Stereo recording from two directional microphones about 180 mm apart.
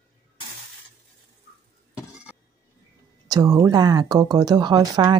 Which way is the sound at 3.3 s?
20° right (ahead or behind).